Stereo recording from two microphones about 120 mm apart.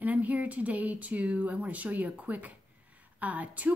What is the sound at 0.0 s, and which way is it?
Speech, 15° right (ahead or behind).